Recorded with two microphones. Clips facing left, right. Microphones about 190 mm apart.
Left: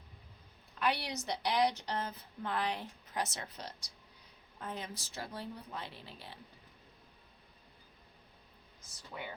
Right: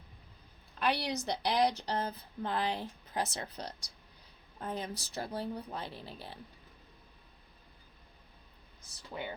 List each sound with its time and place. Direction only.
0.8 s a woman's voice: 35° right (ahead or behind)
9.1 s speech: 20° right (ahead or behind)